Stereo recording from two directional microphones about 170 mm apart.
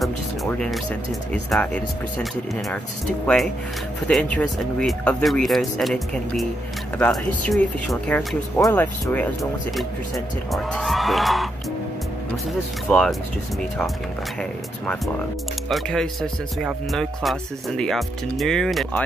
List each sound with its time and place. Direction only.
0.5 s speech: 5° left (ahead or behind)
4.1 s speech: 5° left (ahead or behind)
8.5 s speech: 20° left (ahead or behind)
9.0 s speech: 5° left (ahead or behind)
12.8 s speech: 5° left (ahead or behind)
15.7 s speech: centre (ahead or behind)